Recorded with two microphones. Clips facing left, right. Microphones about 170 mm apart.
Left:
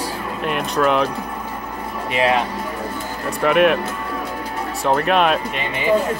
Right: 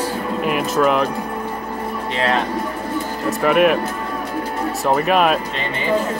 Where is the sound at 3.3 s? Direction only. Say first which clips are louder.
Even; centre (ahead or behind).